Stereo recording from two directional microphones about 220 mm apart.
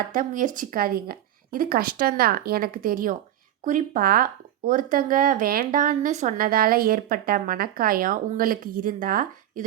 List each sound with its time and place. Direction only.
0.1 s speech: 40° right (ahead or behind)